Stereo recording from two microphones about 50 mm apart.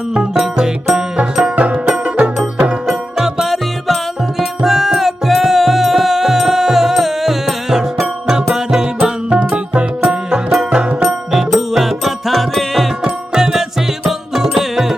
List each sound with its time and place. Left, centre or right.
1.1 s music: right
2.8 s music: centre